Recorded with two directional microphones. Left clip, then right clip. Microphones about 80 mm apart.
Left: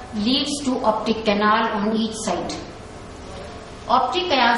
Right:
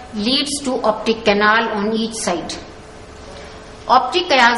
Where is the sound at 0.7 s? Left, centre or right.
Right.